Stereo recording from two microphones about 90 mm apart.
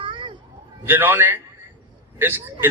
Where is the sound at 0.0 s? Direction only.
70° right (ahead or behind).